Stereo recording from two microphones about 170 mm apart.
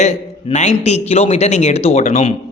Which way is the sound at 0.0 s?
40° left (ahead or behind).